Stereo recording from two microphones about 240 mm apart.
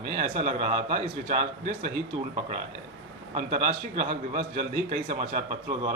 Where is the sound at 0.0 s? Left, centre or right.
Right.